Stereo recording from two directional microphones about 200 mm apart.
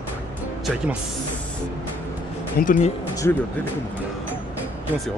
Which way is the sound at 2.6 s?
40° left (ahead or behind).